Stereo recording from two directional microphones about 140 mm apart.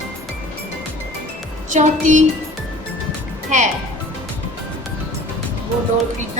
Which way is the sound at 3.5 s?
60° right (ahead or behind).